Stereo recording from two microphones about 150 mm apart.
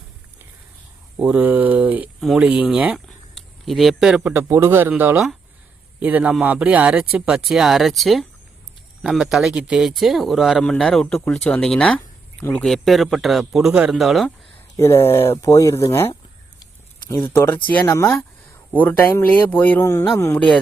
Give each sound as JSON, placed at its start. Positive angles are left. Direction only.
{"t": 1.2, "sound": "speech", "side_deg": -10}
{"t": 12.6, "sound": "speech", "side_deg": 0}
{"t": 14.8, "sound": "speech", "side_deg": 15}
{"t": 17.2, "sound": "speech", "side_deg": 15}